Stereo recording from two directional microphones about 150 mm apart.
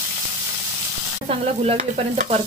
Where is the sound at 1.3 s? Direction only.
40° right (ahead or behind).